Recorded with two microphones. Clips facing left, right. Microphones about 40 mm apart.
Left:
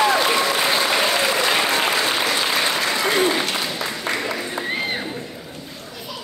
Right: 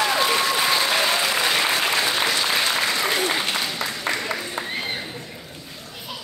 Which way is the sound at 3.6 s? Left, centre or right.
Centre.